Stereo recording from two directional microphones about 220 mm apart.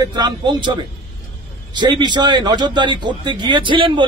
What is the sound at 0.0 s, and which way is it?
A man's voice, 20° right (ahead or behind).